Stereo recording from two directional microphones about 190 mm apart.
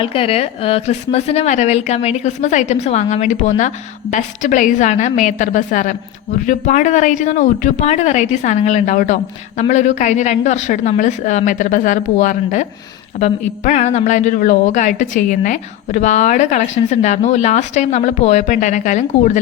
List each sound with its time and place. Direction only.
0.0 s a woman's voice: 30° left (ahead or behind)